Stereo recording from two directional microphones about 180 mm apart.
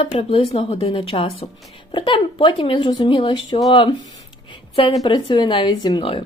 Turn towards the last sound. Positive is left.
turn(degrees=30)  # may be behind; listen again after turning